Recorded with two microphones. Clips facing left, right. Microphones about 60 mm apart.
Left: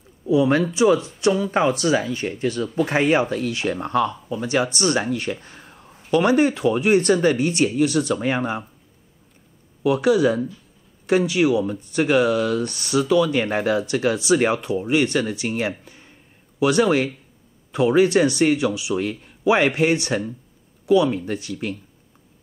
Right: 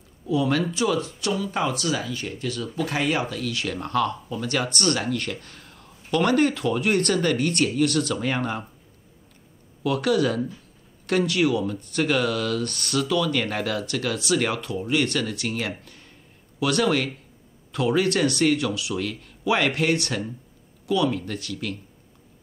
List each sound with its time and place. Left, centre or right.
0.3 s speech: left
9.8 s speech: centre
15.8 s a sound: centre
16.5 s speech: centre